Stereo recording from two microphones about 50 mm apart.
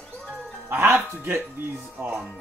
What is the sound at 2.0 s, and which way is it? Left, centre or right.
Speech, right.